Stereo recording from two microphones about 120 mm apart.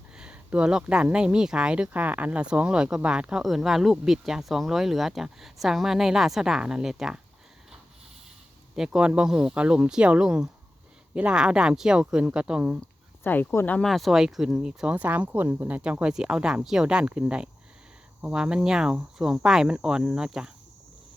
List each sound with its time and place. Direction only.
0.2 s speech: 10° right (ahead or behind)
8.7 s speech: 5° right (ahead or behind)
13.2 s speech: 15° left (ahead or behind)
13.8 s speech: centre (ahead or behind)